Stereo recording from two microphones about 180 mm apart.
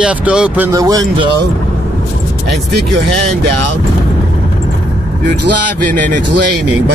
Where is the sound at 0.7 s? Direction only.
20° right (ahead or behind).